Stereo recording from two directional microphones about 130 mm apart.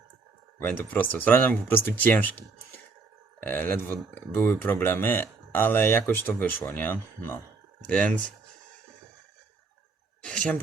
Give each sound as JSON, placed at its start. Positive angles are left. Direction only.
{"t": 0.6, "sound": "speech", "side_deg": 10}
{"t": 3.4, "sound": "speech", "side_deg": 15}
{"t": 10.2, "sound": "a sound", "side_deg": 5}